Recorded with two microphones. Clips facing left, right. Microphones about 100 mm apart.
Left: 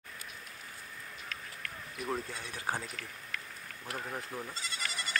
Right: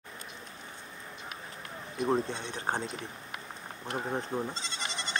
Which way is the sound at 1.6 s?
30° right (ahead or behind).